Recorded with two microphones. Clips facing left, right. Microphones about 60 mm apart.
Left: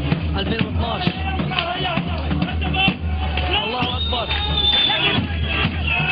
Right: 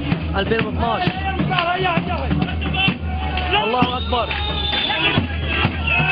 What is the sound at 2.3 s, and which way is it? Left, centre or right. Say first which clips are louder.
Music: right 1 dB; centre.